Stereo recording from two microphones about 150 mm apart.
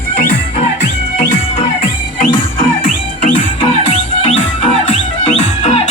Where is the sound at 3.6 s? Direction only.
35° left (ahead or behind).